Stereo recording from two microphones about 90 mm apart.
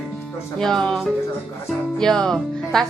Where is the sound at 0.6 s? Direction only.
5° left (ahead or behind).